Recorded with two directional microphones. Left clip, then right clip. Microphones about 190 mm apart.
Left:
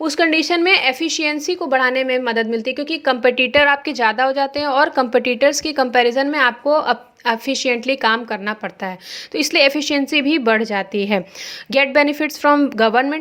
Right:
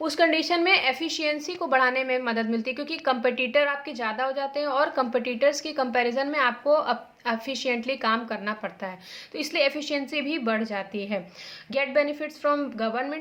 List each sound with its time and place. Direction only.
0.0 s a woman's voice: 35° left (ahead or behind); by 13.1 s 50° left (ahead or behind)